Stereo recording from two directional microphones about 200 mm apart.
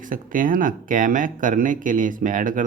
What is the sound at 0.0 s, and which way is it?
Speech, 40° right (ahead or behind).